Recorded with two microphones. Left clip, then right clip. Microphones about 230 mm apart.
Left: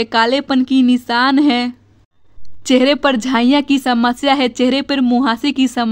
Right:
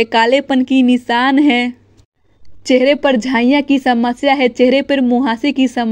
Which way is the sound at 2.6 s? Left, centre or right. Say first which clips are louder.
Right 1 dB; centre.